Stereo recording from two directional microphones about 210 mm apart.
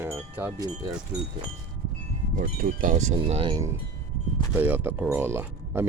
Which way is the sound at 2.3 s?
40° right (ahead or behind).